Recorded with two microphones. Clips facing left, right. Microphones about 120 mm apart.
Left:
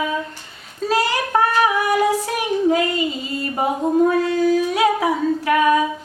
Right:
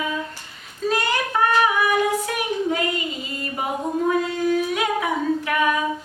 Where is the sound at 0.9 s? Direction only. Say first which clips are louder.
Left 3 dB; 35° left (ahead or behind).